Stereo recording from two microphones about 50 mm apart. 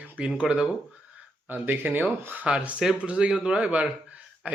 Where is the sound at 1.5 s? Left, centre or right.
Right.